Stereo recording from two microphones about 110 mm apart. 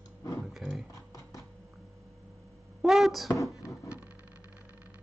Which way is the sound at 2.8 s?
Centre (ahead or behind).